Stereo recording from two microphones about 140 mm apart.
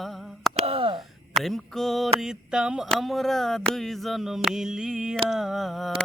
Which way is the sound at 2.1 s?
5° right (ahead or behind).